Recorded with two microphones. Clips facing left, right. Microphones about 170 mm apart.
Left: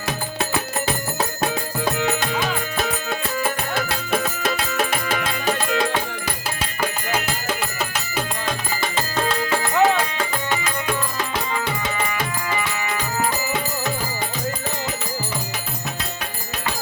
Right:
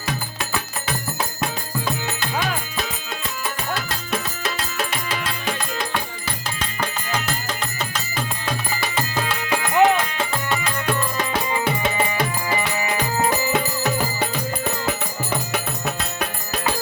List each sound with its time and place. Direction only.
2.0 s music: 70° left (ahead or behind)
9.5 s music: 20° right (ahead or behind)